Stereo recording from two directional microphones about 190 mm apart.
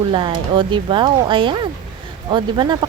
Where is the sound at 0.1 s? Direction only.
25° right (ahead or behind).